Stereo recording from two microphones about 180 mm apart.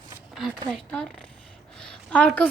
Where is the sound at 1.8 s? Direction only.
5° left (ahead or behind).